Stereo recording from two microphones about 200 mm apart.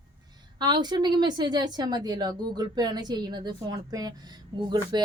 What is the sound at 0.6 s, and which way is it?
A woman's voice, 20° right (ahead or behind).